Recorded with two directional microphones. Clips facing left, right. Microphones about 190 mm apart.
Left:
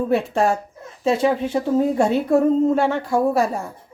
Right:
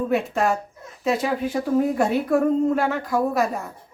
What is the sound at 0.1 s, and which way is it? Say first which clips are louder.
A woman's voice: left 4 dB; 30° left (ahead or behind).